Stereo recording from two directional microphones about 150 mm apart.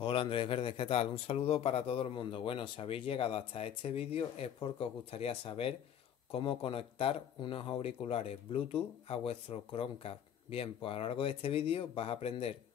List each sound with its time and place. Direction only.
0.0 s speech: 35° left (ahead or behind)